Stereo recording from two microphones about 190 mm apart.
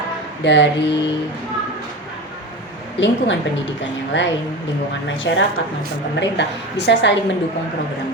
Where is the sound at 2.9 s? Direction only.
70° left (ahead or behind).